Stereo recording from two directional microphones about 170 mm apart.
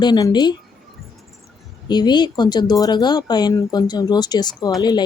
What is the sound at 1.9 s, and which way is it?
Speech, 25° left (ahead or behind).